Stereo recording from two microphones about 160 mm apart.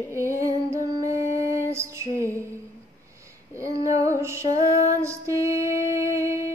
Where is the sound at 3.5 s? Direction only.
20° right (ahead or behind).